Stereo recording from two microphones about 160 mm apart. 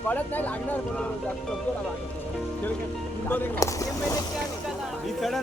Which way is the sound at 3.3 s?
15° left (ahead or behind).